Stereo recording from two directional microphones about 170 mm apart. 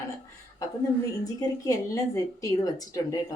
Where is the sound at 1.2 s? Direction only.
20° left (ahead or behind).